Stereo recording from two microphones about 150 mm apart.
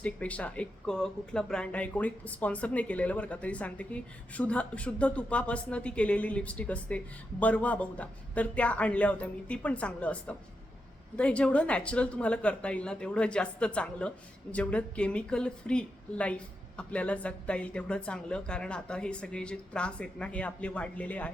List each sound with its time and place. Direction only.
0.0 s speech: 10° left (ahead or behind)